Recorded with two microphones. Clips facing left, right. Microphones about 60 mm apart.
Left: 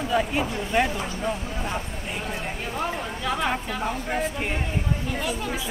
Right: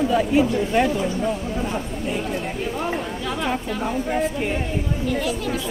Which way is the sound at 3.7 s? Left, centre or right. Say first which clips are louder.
Right 4 dB; centre.